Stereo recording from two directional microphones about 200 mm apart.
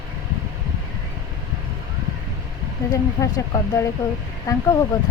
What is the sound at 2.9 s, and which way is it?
Speech, 15° left (ahead or behind).